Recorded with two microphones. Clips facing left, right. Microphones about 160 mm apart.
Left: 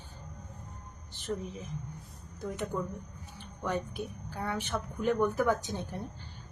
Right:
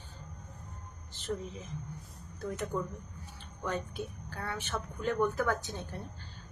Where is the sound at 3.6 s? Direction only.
15° left (ahead or behind).